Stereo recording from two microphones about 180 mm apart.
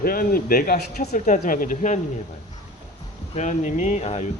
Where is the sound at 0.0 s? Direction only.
55° left (ahead or behind).